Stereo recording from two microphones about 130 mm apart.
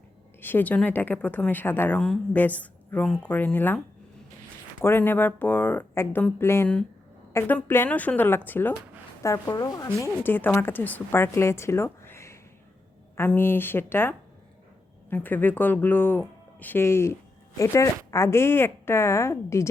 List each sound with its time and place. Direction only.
0.4 s speech: 15° left (ahead or behind)
4.8 s a woman's voice: 15° left (ahead or behind)